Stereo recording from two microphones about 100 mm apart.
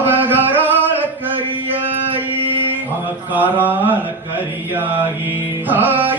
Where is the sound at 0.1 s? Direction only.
20° right (ahead or behind).